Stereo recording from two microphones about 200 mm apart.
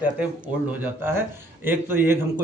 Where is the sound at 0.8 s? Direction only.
10° right (ahead or behind).